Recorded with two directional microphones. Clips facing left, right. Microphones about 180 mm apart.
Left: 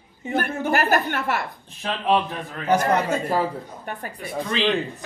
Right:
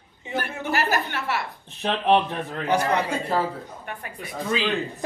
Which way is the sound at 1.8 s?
20° right (ahead or behind).